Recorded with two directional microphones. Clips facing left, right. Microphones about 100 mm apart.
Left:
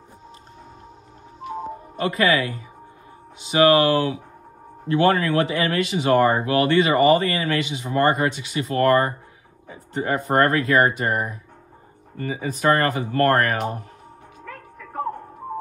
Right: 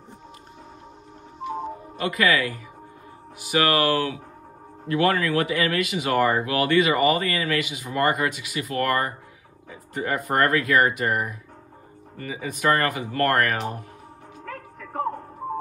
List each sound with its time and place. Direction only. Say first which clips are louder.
2.0 s speech: left 2 dB; 35° left (ahead or behind)